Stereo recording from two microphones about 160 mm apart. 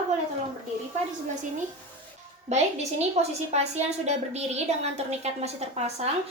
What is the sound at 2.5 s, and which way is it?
A woman's voice, 45° right (ahead or behind).